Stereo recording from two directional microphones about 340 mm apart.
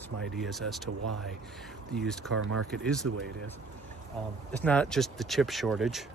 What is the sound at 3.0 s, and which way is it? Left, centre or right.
Speech, right.